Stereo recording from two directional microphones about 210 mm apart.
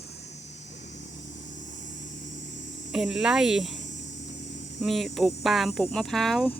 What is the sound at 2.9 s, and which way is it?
Speech, 5° right (ahead or behind).